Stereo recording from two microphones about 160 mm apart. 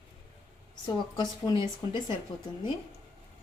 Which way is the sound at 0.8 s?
30° left (ahead or behind).